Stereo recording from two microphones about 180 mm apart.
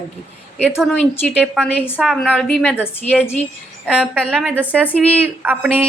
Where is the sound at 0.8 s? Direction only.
Centre (ahead or behind).